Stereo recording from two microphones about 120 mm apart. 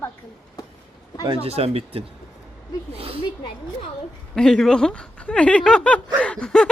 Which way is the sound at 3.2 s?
45° left (ahead or behind).